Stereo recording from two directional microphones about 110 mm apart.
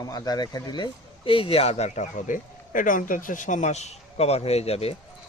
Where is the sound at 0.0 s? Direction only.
35° left (ahead or behind); by 2.0 s 80° left.